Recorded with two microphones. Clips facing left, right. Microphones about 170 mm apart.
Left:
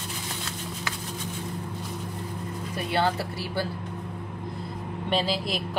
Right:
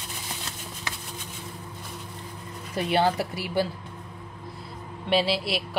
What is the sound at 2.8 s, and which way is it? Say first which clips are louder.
Speech: right 3 dB; 20° right (ahead or behind).